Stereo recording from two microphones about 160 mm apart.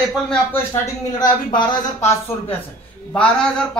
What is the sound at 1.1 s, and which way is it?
Speech, 25° left (ahead or behind).